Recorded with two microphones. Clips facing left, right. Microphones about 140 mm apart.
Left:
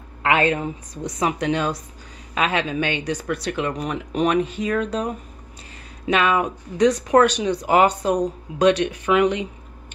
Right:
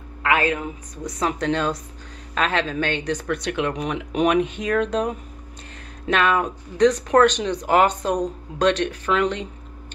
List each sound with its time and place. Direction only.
0.2 s a woman's voice: 25° left (ahead or behind)
1.2 s speech: 10° left (ahead or behind)